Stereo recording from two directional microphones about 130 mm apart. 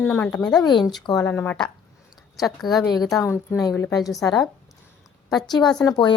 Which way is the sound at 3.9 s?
25° left (ahead or behind).